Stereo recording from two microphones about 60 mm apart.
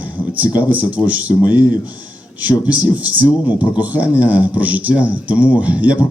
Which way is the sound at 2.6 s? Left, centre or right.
Right.